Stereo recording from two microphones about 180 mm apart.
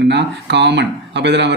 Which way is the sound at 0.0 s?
70° right (ahead or behind).